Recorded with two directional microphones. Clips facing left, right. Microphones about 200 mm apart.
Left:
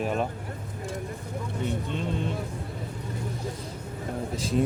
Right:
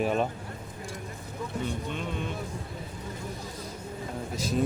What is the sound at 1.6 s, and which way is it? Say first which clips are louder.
Speech: left 6 dB; 30° left (ahead or behind).